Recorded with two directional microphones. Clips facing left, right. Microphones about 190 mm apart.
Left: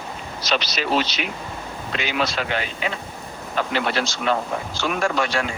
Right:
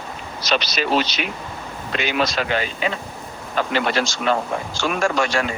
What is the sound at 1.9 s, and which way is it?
Speech, 55° right (ahead or behind).